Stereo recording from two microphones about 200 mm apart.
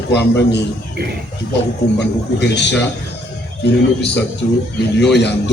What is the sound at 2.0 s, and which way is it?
A man's voice, 60° left (ahead or behind).